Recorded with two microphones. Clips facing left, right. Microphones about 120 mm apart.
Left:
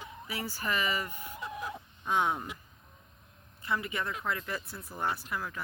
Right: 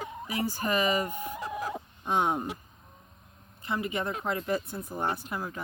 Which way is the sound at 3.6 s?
20° right (ahead or behind).